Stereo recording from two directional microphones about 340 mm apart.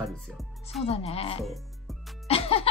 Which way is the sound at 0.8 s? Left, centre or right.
Centre.